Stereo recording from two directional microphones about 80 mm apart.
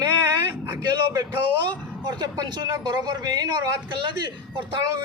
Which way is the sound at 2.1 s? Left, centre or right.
Right.